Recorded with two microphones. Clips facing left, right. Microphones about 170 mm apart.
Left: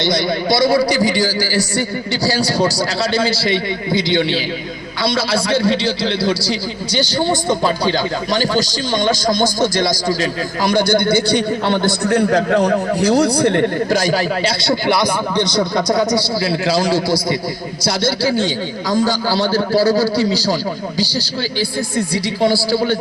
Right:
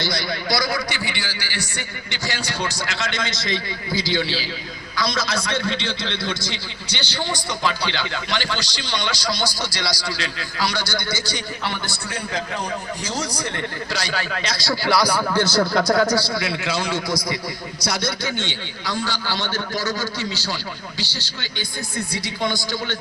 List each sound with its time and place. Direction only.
0.0 s a man's voice: 25° left (ahead or behind); by 14.5 s 40° left (ahead or behind)
14.6 s speech: 25° left (ahead or behind)
15.7 s speech: centre (ahead or behind)
16.4 s a man's voice: 35° left (ahead or behind)